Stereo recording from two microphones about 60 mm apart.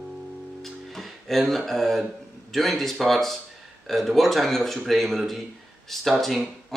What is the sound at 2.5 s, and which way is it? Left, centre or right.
Speech, centre.